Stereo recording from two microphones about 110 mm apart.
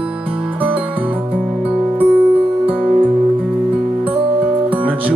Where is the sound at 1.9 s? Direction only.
15° right (ahead or behind).